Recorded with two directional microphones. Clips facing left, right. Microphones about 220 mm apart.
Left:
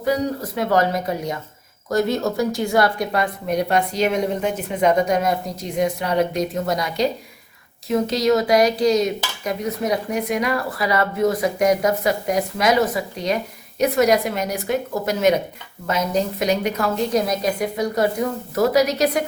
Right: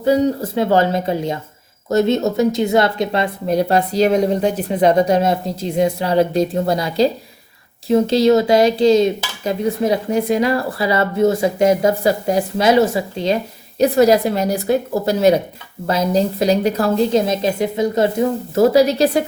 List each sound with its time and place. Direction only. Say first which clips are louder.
0.0 s speech: right 6 dB; 30° right (ahead or behind)